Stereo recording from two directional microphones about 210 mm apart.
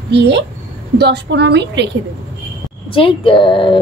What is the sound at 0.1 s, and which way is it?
A woman's voice, 55° right (ahead or behind).